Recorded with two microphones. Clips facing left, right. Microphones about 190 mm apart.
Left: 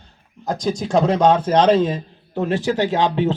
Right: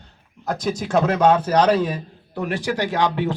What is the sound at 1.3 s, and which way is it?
A man's voice, 25° left (ahead or behind).